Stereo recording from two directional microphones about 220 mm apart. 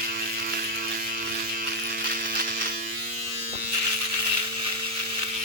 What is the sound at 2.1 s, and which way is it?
Electric shaver, 40° right (ahead or behind).